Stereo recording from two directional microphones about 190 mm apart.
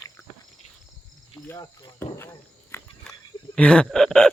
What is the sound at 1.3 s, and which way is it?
Speech, 15° left (ahead or behind).